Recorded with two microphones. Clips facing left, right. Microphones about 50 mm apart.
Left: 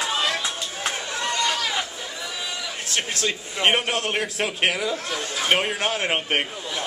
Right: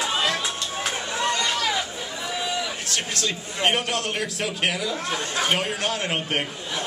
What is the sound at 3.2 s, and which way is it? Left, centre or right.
A man's voice, left.